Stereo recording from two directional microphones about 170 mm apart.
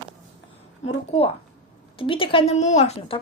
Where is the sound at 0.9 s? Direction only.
35° left (ahead or behind).